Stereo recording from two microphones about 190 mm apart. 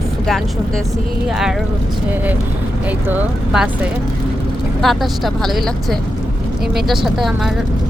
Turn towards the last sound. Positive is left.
turn(degrees=0)  # may be behind; listen again after turning